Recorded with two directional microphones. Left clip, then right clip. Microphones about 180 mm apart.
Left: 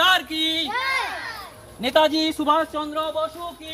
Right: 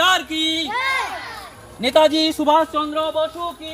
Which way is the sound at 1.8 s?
50° right (ahead or behind).